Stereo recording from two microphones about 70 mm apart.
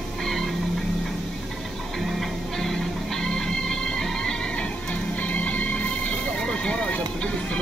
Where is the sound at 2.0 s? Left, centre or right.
Centre.